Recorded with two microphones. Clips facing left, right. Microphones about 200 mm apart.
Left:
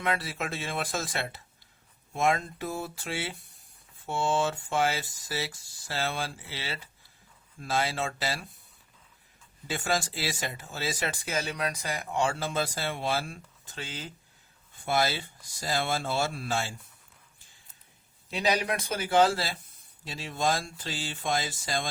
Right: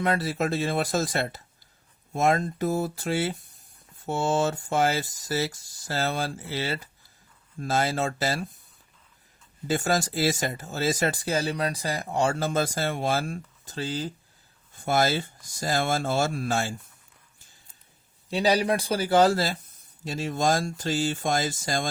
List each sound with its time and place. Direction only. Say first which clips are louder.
0.0 s speech: right 6 dB; 40° right (ahead or behind)
9.6 s speech: right 5 dB; 40° right (ahead or behind)
18.3 s speech: right 5 dB; 35° right (ahead or behind)